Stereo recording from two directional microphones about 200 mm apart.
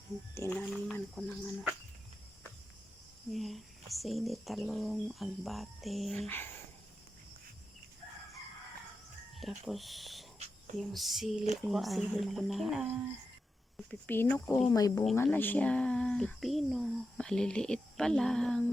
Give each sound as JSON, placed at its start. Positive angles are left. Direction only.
{"t": 0.3, "sound": "speech", "side_deg": 10}
{"t": 3.3, "sound": "speech", "side_deg": 0}
{"t": 9.4, "sound": "speech", "side_deg": 0}
{"t": 14.7, "sound": "speech", "side_deg": 15}